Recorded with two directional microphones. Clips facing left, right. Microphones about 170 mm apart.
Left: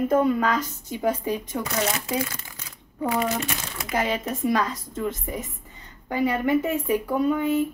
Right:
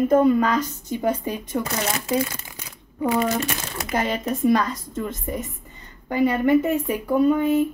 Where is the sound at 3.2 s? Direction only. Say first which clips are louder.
Right 3 dB; 40° right (ahead or behind).